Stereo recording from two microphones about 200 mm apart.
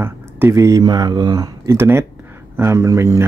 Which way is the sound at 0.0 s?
10° right (ahead or behind).